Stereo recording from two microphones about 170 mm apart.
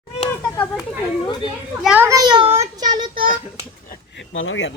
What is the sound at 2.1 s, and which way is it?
Speech, 25° right (ahead or behind).